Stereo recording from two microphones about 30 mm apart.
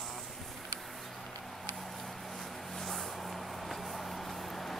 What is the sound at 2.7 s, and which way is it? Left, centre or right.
Vehicle, centre.